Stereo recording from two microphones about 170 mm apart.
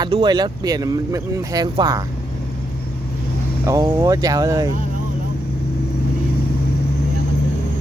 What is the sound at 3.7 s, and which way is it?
Speech, 20° right (ahead or behind).